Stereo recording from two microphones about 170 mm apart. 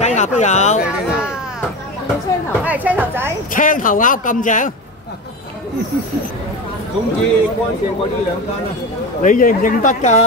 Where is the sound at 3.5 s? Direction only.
50° left (ahead or behind).